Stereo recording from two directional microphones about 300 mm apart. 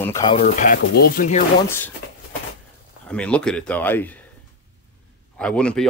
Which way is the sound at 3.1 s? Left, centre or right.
Centre.